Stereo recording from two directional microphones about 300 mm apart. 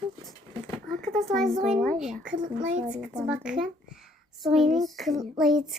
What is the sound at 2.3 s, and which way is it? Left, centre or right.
Speech, right.